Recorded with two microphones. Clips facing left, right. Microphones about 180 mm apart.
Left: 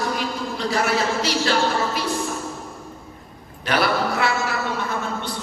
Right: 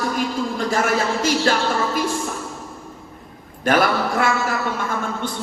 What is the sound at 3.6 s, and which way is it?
Speech, 50° right (ahead or behind).